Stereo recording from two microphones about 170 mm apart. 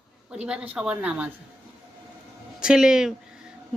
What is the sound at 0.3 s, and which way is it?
Speech, 5° right (ahead or behind).